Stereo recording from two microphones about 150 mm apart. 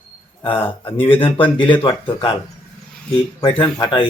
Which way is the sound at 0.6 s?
35° left (ahead or behind).